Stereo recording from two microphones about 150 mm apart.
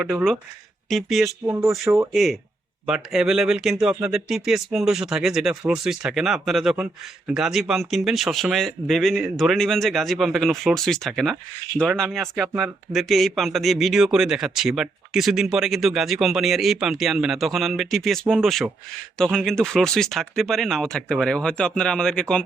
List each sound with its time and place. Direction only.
0.0 s speech: 10° right (ahead or behind)
1.5 s speech: 15° right (ahead or behind)
2.1 s speech: centre (ahead or behind)